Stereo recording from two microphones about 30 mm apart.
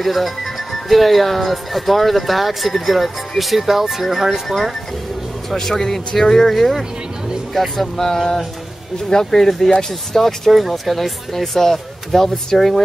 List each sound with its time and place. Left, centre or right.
0.0 s speech: centre
5.5 s speech: centre
10.5 s speech: centre